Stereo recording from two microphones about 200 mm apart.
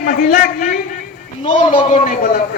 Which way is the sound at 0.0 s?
40° left (ahead or behind).